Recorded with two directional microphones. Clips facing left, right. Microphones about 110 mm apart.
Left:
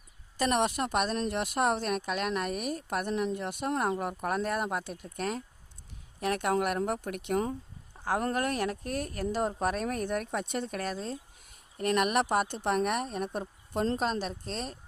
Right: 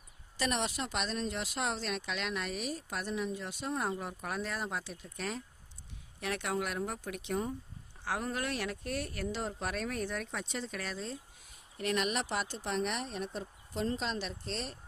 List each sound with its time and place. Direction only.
0.3 s speech: 50° left (ahead or behind); by 7.5 s 70° left (ahead or behind)
7.9 s speech: 45° left (ahead or behind)